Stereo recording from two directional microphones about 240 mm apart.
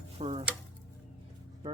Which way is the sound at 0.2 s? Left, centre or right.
Right.